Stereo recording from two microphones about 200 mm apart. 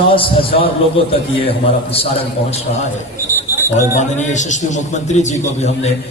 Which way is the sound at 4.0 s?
35° left (ahead or behind).